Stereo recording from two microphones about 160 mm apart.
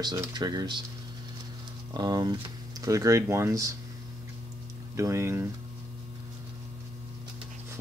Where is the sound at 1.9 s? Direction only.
25° right (ahead or behind).